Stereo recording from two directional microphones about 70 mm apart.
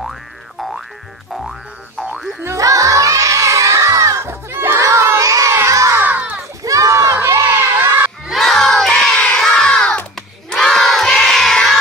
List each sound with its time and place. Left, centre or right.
0.0 s boing: centre
2.4 s crowd: right
5.1 s children shouting: right
5.9 s a sound: right
6.6 s crowd: right
8.3 s crowd: centre